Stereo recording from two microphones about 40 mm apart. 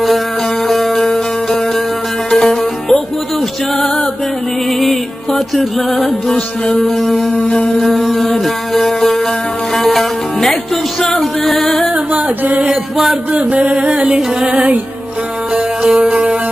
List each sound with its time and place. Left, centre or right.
0.7 s music: centre
6.3 s music: left
6.8 s music: centre
7.3 s music: left
7.8 s music: centre
11.9 s music: right
15.5 s music: centre
16.1 s music: right